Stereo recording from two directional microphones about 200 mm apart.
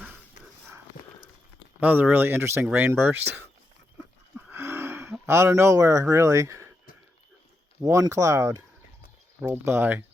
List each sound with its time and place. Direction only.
1.8 s speech: 10° right (ahead or behind)
4.4 s a sound: 10° right (ahead or behind)
7.8 s speech: 15° right (ahead or behind)